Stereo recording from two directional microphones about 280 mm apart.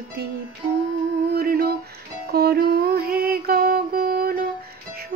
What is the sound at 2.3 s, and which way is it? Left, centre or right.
Music, right.